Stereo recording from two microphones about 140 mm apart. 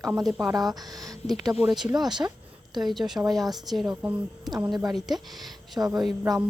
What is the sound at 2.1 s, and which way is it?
Speech, 30° right (ahead or behind).